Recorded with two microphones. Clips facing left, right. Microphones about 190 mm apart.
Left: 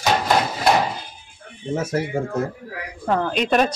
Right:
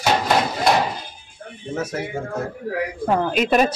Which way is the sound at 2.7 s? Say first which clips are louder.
Right 10 dB; 60° right (ahead or behind).